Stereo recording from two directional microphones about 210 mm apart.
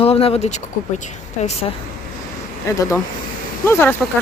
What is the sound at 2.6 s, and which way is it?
Speech, 15° left (ahead or behind).